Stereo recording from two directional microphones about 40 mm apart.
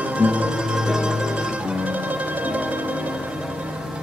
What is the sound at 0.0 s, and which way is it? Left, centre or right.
Music, right.